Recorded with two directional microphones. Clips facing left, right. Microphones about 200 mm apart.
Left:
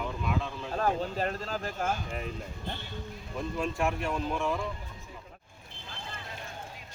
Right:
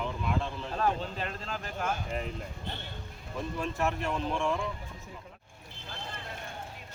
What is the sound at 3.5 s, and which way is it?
Speech, 15° left (ahead or behind).